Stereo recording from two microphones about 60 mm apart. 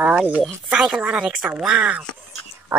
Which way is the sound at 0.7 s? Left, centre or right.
Centre.